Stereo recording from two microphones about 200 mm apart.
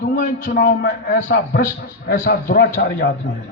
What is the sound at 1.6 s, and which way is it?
A man's voice, 50° left (ahead or behind).